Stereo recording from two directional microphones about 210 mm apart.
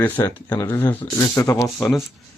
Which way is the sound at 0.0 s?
15° left (ahead or behind).